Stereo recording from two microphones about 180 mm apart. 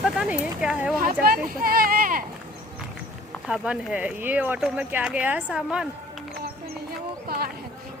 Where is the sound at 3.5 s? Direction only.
5° right (ahead or behind).